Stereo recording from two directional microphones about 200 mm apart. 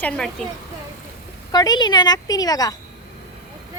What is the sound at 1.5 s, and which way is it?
A woman's voice, 20° left (ahead or behind).